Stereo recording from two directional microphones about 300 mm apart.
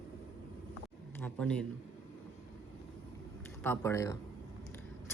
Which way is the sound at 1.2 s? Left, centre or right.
Centre.